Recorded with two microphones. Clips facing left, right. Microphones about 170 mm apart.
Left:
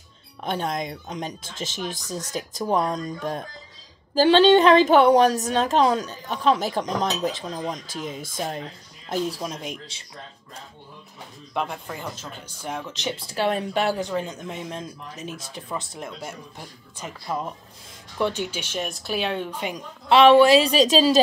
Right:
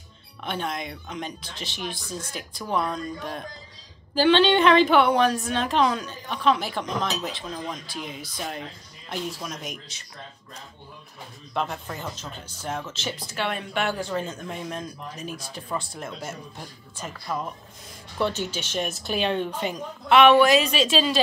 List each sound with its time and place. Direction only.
0.4 s a woman's voice: 40° left (ahead or behind)
9.1 s speech: 30° left (ahead or behind)
11.5 s speech: 10° left (ahead or behind)
13.3 s a woman's voice: 35° left (ahead or behind)
13.9 s speech: 15° left (ahead or behind)
20.1 s a woman's voice: 30° left (ahead or behind)